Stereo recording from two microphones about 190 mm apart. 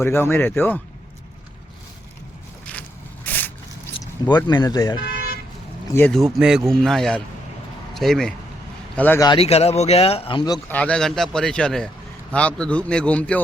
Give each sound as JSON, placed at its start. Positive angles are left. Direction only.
{"t": 0.0, "sound": "speech", "side_deg": 10}
{"t": 3.2, "sound": "vehicle", "side_deg": 10}
{"t": 4.4, "sound": "speech", "side_deg": 20}
{"t": 5.9, "sound": "speech", "side_deg": 10}
{"t": 6.3, "sound": "speech", "side_deg": -5}
{"t": 9.2, "sound": "speech", "side_deg": 25}
{"t": 10.7, "sound": "speech", "side_deg": 5}